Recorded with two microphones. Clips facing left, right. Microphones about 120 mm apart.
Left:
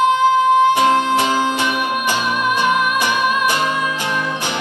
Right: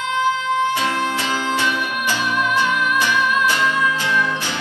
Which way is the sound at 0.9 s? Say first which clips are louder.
Left 6 dB; 15° left (ahead or behind).